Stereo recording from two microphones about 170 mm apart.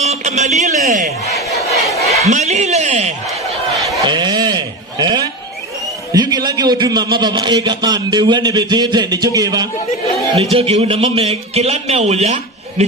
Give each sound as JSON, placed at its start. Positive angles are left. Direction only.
{"t": 0.0, "sound": "a sound", "side_deg": -40}
{"t": 1.6, "sound": "crowd", "side_deg": 20}
{"t": 2.2, "sound": "a man's voice", "side_deg": -45}
{"t": 3.9, "sound": "a sound", "side_deg": -25}
{"t": 6.1, "sound": "a man's voice", "side_deg": -25}
{"t": 10.3, "sound": "a man's voice", "side_deg": -35}